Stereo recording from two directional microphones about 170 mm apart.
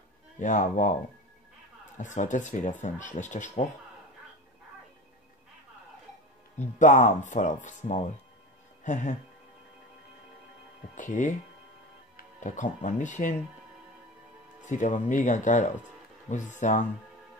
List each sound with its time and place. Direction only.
0.4 s speech: 50° left (ahead or behind)
2.0 s speech: 45° left (ahead or behind)
6.6 s speech: 45° left (ahead or behind)
11.0 s speech: 50° left (ahead or behind)
14.7 s speech: 45° left (ahead or behind)